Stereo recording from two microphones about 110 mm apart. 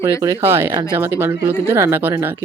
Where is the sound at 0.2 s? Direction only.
25° right (ahead or behind).